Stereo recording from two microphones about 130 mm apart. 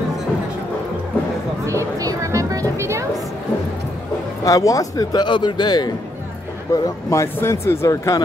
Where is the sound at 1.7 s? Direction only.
25° right (ahead or behind).